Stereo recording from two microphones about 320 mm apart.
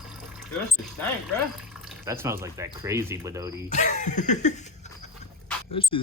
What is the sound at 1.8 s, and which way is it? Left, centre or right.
Speech, centre.